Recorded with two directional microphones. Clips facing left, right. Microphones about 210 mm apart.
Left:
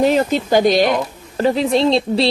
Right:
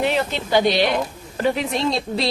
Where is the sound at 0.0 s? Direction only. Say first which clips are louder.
Left 7 dB; 40° left (ahead or behind).